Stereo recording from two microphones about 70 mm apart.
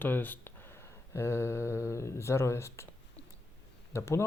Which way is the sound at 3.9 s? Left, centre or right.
Left.